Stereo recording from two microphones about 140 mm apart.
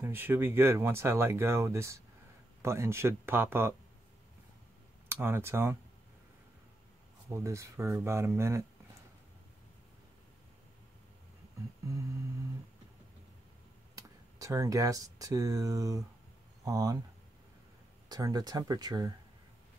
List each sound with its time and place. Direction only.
0.0 s speech: 15° right (ahead or behind)
5.0 s speech: 20° right (ahead or behind)
7.2 s speech: 20° right (ahead or behind)
13.9 s speech: 25° right (ahead or behind)
18.0 s speech: 30° right (ahead or behind)